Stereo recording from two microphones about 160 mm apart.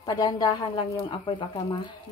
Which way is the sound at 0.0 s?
25° left (ahead or behind).